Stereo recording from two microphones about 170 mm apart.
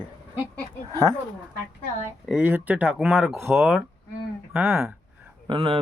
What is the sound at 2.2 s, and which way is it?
Speech, 10° right (ahead or behind).